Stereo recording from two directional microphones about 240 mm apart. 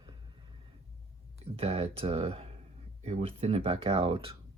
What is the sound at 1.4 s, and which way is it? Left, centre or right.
Speech, right.